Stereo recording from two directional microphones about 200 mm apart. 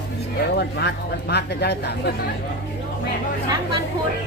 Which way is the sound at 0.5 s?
55° left (ahead or behind).